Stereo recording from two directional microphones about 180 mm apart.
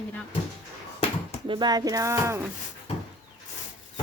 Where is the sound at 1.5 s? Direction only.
25° right (ahead or behind).